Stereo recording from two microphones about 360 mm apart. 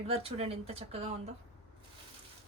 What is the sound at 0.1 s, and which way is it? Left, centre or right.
Speech, centre.